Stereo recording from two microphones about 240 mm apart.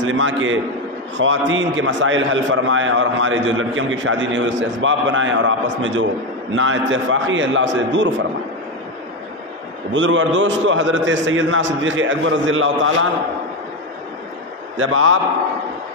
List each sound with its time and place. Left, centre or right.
0.0 s a man's voice: right
9.9 s a man's voice: right
14.8 s a man's voice: right